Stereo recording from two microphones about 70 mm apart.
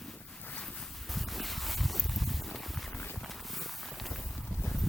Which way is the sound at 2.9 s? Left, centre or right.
Left.